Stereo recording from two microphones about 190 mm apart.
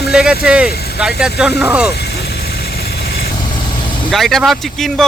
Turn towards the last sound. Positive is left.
turn(degrees=0)  # may be behind; listen again after turning